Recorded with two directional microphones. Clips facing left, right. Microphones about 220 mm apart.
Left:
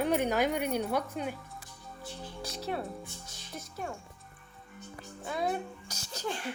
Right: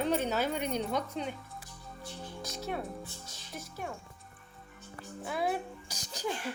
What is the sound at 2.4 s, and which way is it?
Music, 30° left (ahead or behind).